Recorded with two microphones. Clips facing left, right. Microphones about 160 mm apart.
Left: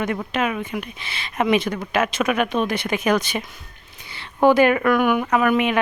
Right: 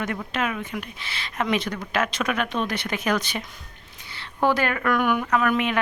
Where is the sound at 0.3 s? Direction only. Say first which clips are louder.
Left 3 dB; 15° left (ahead or behind).